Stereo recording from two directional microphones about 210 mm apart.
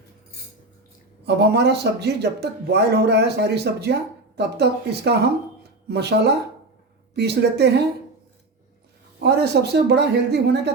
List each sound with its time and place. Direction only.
1.2 s speech: 50° right (ahead or behind)
9.2 s speech: 50° right (ahead or behind)